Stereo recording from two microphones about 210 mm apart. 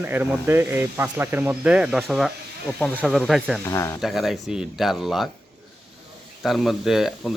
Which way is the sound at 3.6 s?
15° left (ahead or behind).